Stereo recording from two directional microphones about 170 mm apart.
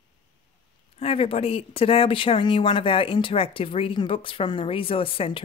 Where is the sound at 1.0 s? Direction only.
35° left (ahead or behind).